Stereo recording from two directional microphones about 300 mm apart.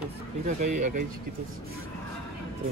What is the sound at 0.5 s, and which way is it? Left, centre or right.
Speech, right.